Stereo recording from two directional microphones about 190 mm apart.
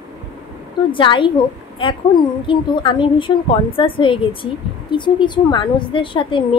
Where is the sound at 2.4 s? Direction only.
25° left (ahead or behind).